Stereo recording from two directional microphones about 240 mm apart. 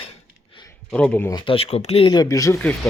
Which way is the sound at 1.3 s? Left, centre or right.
Left.